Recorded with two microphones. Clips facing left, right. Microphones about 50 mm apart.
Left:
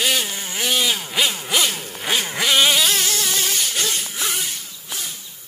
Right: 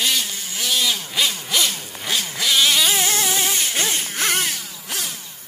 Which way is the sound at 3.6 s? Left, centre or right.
Right.